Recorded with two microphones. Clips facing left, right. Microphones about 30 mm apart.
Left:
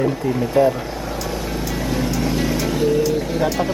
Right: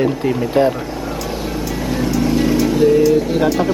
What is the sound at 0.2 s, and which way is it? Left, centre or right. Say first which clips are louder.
Speech: right 3 dB; right.